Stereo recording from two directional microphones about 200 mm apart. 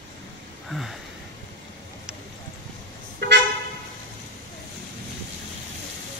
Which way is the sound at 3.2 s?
60° right (ahead or behind).